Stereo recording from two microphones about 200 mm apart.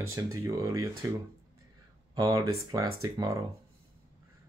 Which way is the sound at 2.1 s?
20° right (ahead or behind).